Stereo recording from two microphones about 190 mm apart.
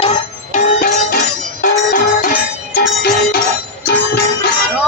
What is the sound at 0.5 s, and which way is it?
Music, 45° left (ahead or behind).